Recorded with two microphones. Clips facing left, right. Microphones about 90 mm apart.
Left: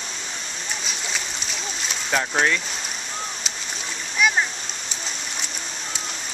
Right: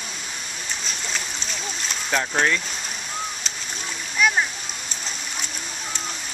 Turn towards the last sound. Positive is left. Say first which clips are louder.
# even
turn(degrees=0)  # may be behind; listen again after turning